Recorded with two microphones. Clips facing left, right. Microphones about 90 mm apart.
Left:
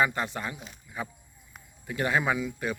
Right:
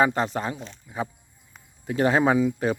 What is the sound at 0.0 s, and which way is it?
Speech, 35° right (ahead or behind).